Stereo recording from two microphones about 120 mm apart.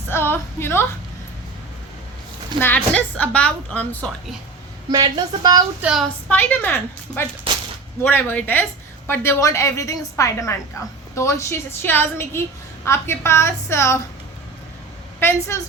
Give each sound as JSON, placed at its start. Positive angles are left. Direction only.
{"t": 0.1, "sound": "a woman's voice", "side_deg": 20}
{"t": 2.6, "sound": "speech", "side_deg": 15}
{"t": 4.9, "sound": "speech", "side_deg": -35}
{"t": 5.8, "sound": "a woman's voice", "side_deg": -5}
{"t": 6.2, "sound": "a woman's voice", "side_deg": 15}